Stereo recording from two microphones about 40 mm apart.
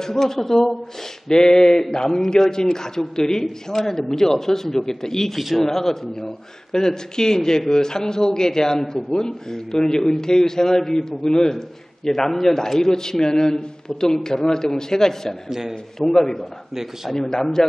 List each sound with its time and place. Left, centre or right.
0.0 s a man's voice: centre
15.4 s a man's voice: centre
16.0 s a man's voice: centre